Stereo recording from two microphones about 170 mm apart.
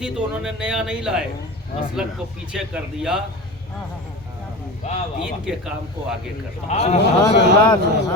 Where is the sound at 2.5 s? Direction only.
5° right (ahead or behind).